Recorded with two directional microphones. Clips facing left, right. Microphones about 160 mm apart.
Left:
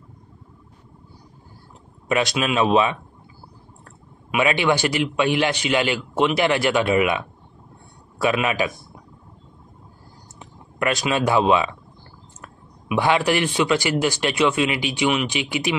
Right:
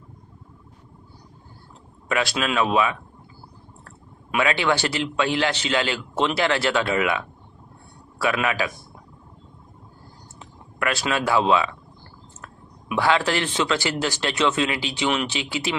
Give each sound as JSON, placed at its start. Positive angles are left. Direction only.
{"t": 2.0, "sound": "speech", "side_deg": 20}
{"t": 4.3, "sound": "a man's voice", "side_deg": 15}
{"t": 10.4, "sound": "a man's voice", "side_deg": 20}